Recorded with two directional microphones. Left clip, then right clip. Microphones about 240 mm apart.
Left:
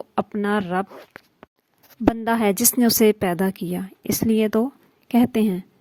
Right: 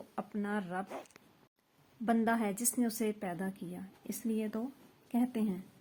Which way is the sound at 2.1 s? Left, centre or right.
Left.